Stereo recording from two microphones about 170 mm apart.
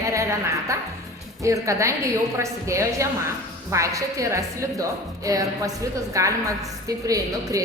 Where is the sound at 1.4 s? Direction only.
20° right (ahead or behind).